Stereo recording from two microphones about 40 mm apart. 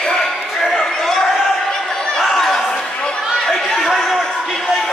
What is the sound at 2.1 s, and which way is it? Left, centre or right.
Chatter, centre.